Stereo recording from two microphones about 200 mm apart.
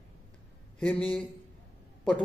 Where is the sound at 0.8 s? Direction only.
5° left (ahead or behind).